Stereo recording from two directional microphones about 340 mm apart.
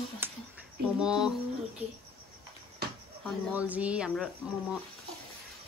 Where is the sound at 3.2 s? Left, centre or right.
Centre.